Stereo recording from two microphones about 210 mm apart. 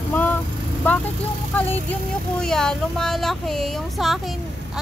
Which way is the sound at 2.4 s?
5° left (ahead or behind).